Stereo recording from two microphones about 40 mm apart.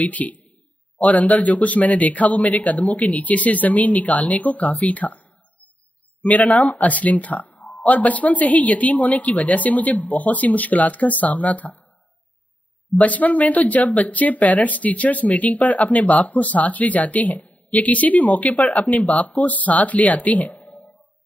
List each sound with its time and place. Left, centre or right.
0.0 s a man's voice: left
6.2 s speech: left
12.9 s speech: left